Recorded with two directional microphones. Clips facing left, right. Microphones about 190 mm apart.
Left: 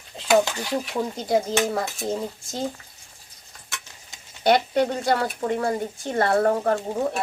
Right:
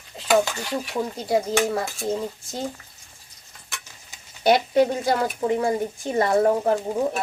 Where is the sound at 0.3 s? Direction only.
Centre (ahead or behind).